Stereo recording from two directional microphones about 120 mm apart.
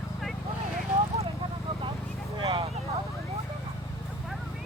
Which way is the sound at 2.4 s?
45° right (ahead or behind).